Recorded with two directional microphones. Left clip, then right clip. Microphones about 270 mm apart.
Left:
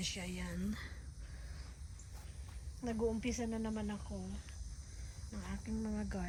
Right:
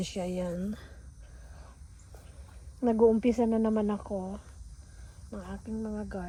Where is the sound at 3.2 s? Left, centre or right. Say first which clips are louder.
Right 14 dB; centre.